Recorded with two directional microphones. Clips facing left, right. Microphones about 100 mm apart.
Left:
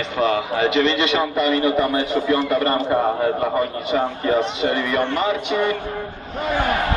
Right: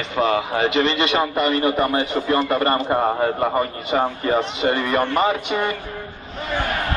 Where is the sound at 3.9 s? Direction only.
50° right (ahead or behind).